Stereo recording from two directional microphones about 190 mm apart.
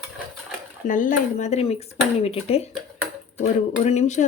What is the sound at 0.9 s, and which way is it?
Speech, 45° left (ahead or behind).